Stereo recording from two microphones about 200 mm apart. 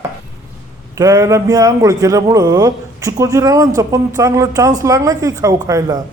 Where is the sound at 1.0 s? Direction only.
15° right (ahead or behind).